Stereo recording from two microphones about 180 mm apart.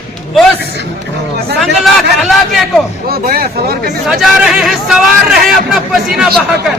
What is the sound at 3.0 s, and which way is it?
Speech, 55° right (ahead or behind).